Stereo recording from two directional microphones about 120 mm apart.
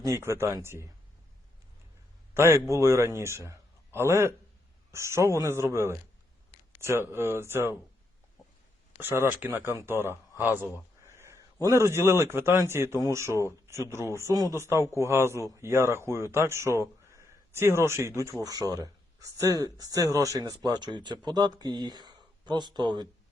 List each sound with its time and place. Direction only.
0.0 s a man's voice: 25° right (ahead or behind)
2.3 s a man's voice: 20° right (ahead or behind)
9.0 s a man's voice: 20° right (ahead or behind); by 23.0 s 40° right (ahead or behind)